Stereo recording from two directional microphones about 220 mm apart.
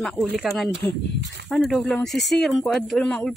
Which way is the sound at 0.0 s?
Centre (ahead or behind).